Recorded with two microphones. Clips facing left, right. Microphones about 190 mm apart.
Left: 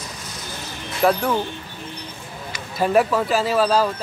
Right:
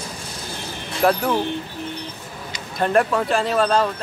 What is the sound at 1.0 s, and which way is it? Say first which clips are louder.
Speech: even; centre (ahead or behind).